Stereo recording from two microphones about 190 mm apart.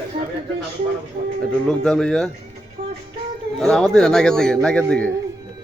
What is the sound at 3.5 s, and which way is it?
A man's voice, centre (ahead or behind).